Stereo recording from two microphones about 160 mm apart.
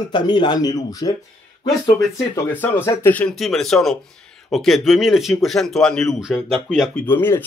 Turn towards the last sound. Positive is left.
turn(degrees=15)  # may be behind; listen again after turning